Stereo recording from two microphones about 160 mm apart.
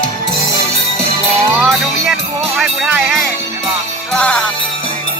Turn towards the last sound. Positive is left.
turn(degrees=10)  # may be behind; listen again after turning